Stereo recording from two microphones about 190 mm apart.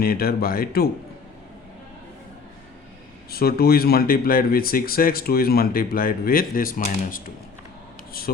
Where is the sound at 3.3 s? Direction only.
55° left (ahead or behind).